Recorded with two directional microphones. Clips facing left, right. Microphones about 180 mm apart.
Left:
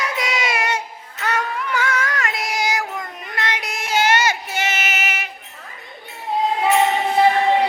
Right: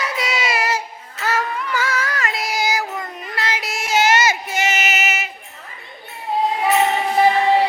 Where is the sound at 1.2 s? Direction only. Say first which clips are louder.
Right 1 dB; centre (ahead or behind).